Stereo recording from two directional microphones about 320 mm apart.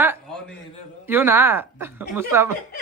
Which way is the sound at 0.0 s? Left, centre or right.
Centre.